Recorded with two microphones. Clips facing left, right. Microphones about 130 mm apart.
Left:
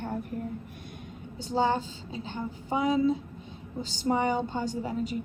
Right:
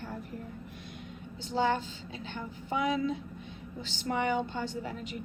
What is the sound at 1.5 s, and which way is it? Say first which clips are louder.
Speech: left 3 dB; 40° left (ahead or behind).